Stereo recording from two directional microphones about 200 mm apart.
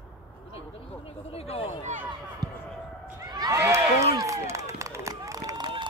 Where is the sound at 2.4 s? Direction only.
20° right (ahead or behind).